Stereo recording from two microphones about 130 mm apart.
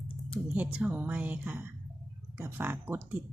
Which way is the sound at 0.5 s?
10° right (ahead or behind).